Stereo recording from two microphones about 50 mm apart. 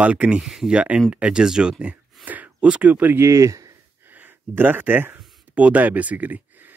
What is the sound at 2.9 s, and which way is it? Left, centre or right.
Speech, right.